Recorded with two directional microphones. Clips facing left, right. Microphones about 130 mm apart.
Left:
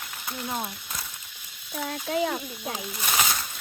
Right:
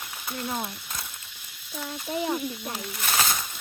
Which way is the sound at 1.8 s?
90° left.